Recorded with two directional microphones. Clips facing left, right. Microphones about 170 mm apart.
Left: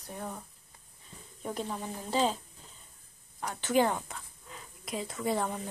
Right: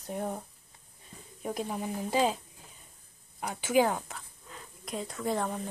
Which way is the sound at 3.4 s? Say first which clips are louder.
Right 1 dB; 10° right (ahead or behind).